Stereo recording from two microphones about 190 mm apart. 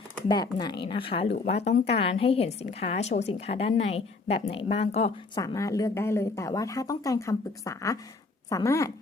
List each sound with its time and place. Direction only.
0.3 s a woman's voice: 20° left (ahead or behind)
5.4 s speech: 15° left (ahead or behind)